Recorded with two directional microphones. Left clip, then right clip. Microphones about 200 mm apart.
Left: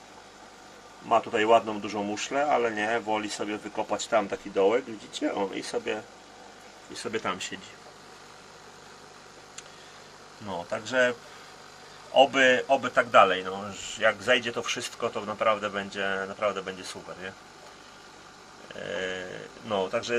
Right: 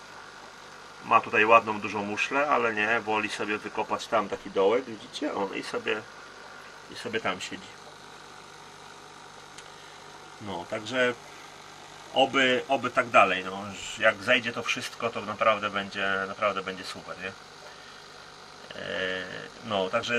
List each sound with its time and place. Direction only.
1.0 s a man's voice: 20° left (ahead or behind)
7.2 s a man's voice: 15° left (ahead or behind)
10.7 s speech: 20° left (ahead or behind)
12.1 s a man's voice: 20° left (ahead or behind)
18.9 s a man's voice: 5° left (ahead or behind)